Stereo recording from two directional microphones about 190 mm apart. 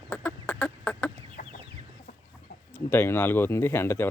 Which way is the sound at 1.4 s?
50° left (ahead or behind).